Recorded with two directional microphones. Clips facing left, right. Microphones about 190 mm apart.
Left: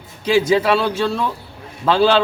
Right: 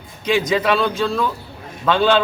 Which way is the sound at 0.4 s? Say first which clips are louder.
Left 3 dB; 30° left (ahead or behind).